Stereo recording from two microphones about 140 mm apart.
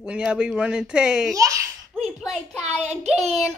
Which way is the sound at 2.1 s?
5° left (ahead or behind).